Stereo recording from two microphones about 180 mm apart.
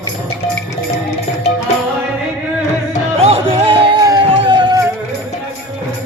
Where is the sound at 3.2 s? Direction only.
35° right (ahead or behind).